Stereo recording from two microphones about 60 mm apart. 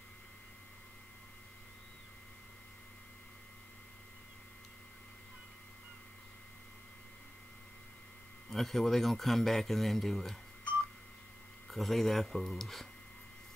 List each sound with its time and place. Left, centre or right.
8.5 s speech: centre
11.7 s speech: centre